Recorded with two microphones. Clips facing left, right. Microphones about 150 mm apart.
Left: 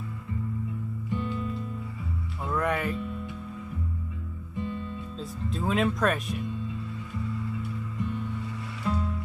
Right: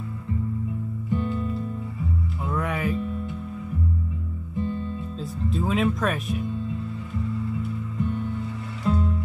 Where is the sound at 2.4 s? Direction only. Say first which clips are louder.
Even; centre (ahead or behind).